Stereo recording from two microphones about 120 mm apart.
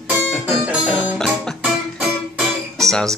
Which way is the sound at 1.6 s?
10° right (ahead or behind).